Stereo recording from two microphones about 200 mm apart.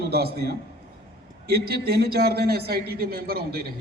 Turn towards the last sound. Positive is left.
turn(degrees=-50)  # may be behind; listen again after turning